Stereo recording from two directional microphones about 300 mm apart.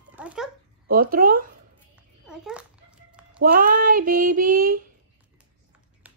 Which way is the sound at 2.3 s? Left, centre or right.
Centre.